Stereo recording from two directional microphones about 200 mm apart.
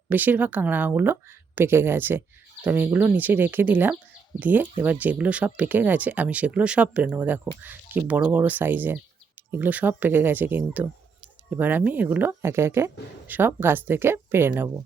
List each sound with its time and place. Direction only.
0.1 s speech: 10° right (ahead or behind)